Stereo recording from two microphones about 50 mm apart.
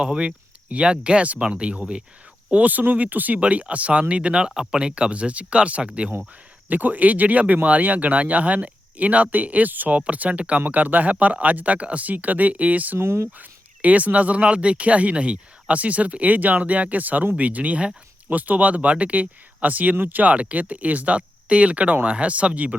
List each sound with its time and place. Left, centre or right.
0.0 s speech: centre
2.5 s speech: right
13.0 s speech: right
13.4 s speech: right